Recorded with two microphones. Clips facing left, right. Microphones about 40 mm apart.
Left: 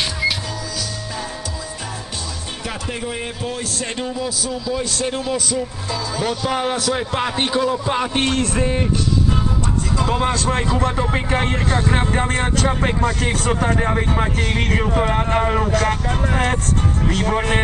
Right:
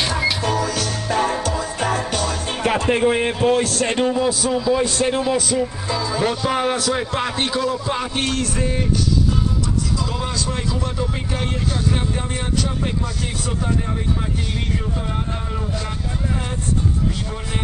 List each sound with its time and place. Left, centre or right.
0.5 s music: right
3.8 s a man's voice: right; by 8.8 s left
9.9 s speech: left
17.1 s speech: left